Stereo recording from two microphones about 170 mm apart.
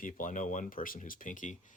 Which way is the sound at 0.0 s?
50° left (ahead or behind).